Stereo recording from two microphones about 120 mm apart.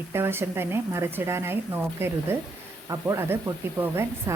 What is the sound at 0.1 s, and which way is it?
A woman's voice, 20° right (ahead or behind).